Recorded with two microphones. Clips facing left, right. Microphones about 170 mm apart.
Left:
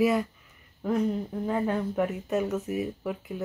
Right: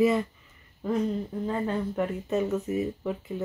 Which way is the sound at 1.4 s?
10° left (ahead or behind).